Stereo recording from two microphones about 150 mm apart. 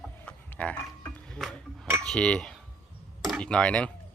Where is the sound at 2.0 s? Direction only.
5° left (ahead or behind).